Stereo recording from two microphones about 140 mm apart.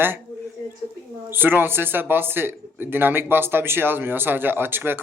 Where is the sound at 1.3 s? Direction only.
15° right (ahead or behind).